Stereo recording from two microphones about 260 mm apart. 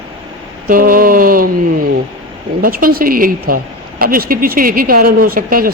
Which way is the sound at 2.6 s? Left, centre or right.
Right.